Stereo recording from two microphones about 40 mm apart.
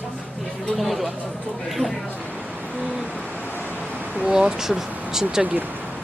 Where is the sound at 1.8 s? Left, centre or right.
Right.